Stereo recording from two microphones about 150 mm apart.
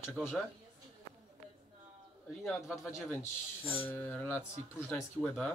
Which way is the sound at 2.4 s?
20° left (ahead or behind).